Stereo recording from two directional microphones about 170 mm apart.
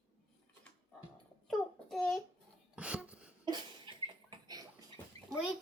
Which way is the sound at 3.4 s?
25° right (ahead or behind).